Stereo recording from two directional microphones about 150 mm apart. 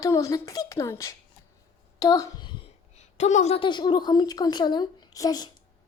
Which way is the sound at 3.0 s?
50° left (ahead or behind).